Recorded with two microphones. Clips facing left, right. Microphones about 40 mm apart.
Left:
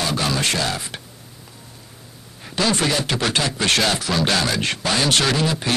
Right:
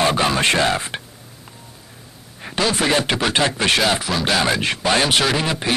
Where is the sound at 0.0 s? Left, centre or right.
Right.